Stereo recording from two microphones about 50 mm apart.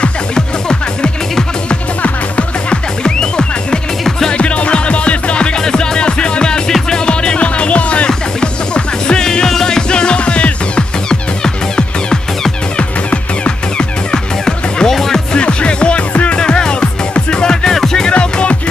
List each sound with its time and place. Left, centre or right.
0.0 s music: centre
15.3 s music: left
18.1 s music: left